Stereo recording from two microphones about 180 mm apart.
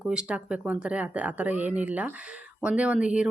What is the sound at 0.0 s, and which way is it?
Speech, 5° right (ahead or behind).